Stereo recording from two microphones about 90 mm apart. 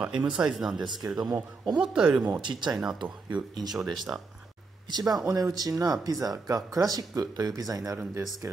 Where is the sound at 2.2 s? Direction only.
50° right (ahead or behind).